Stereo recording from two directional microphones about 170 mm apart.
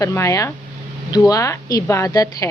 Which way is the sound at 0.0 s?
15° left (ahead or behind).